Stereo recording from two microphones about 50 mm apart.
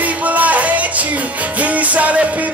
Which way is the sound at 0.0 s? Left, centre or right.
Right.